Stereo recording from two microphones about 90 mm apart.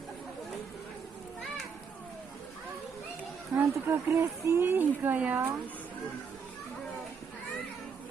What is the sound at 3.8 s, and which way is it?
A woman's voice, 30° right (ahead or behind).